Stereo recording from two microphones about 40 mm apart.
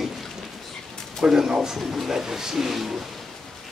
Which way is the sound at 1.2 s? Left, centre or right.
Centre.